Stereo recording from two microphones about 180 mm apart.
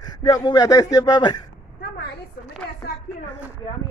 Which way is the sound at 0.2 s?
20° left (ahead or behind).